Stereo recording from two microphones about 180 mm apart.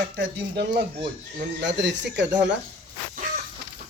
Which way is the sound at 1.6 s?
80° right.